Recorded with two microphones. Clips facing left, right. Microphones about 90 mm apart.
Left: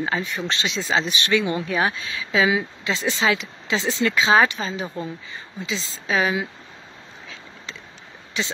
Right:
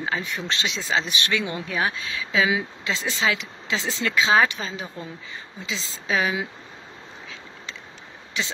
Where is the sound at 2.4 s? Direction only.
Centre (ahead or behind).